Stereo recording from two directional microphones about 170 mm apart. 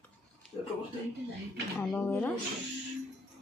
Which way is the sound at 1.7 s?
10° left (ahead or behind).